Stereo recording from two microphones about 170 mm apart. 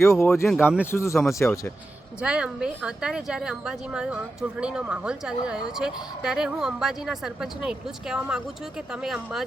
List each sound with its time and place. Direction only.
0.0 s speech: 15° left (ahead or behind)
0.4 s a woman's voice: 5° right (ahead or behind)
0.9 s speech: 15° left (ahead or behind)
2.2 s a woman's voice: 5° right (ahead or behind)